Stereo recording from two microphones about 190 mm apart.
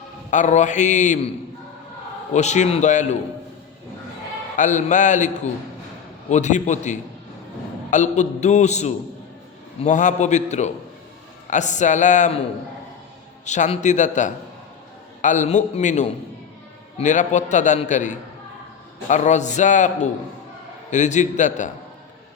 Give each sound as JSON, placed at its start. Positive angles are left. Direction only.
{"t": 0.3, "sound": "a man's voice", "side_deg": 40}
{"t": 2.3, "sound": "a man's voice", "side_deg": 35}
{"t": 4.5, "sound": "a man's voice", "side_deg": 40}
{"t": 13.4, "sound": "a man's voice", "side_deg": 40}